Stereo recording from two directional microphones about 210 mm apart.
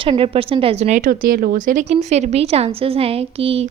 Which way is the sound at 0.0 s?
25° right (ahead or behind).